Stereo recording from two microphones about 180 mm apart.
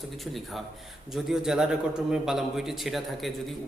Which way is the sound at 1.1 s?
5° right (ahead or behind).